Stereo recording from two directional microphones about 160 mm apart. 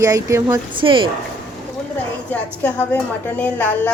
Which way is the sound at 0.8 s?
30° right (ahead or behind).